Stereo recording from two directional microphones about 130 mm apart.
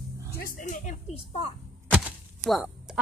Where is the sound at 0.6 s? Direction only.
75° left (ahead or behind).